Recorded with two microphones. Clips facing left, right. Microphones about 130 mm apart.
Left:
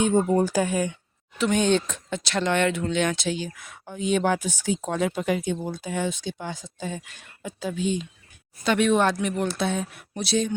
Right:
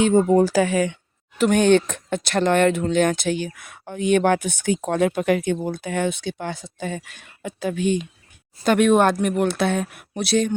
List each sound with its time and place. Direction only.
0.0 s speech: 90° right
1.4 s speech: 50° right (ahead or behind)
8.6 s speech: 50° right (ahead or behind)